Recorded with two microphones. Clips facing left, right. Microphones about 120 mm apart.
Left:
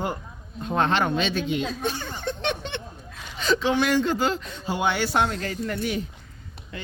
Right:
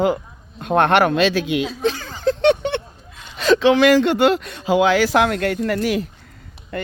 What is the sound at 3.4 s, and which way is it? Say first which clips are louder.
Speech: right 9 dB; 90° right.